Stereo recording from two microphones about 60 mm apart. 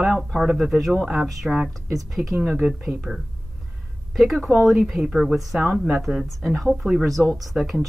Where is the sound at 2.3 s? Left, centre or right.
Centre.